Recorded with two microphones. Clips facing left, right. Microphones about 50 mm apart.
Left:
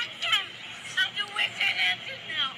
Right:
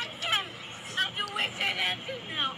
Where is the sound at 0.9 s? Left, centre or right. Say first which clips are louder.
Left 2 dB; centre.